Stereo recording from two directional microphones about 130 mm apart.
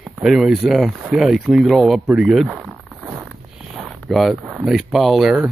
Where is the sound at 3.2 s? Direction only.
Centre (ahead or behind).